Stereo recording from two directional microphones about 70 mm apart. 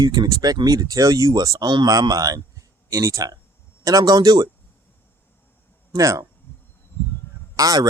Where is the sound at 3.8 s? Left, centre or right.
Right.